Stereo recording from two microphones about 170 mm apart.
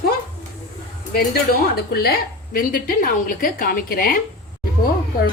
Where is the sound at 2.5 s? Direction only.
55° left (ahead or behind).